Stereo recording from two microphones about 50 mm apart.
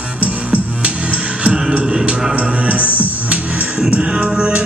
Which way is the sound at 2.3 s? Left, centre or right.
Right.